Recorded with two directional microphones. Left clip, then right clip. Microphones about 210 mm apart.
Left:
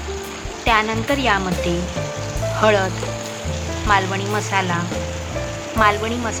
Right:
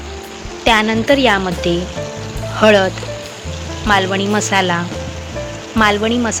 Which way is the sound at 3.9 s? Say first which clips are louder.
Right 4 dB; 35° right (ahead or behind).